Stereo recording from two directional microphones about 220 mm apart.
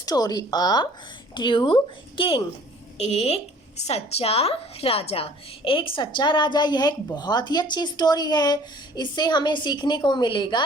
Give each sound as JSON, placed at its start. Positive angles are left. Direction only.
{"t": 0.0, "sound": "a woman's voice", "side_deg": 15}